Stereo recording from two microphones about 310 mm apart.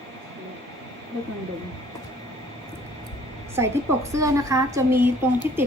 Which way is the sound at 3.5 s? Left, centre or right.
Centre.